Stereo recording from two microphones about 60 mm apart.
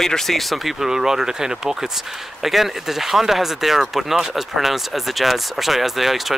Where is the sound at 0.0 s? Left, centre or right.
Centre.